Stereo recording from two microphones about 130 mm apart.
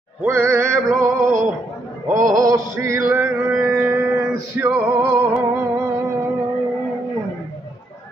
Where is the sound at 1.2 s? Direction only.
75° right (ahead or behind).